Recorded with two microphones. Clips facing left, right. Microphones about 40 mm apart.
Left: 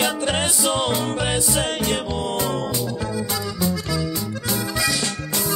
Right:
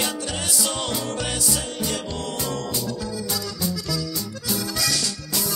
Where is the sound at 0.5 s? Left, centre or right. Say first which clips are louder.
Left 5 dB; left.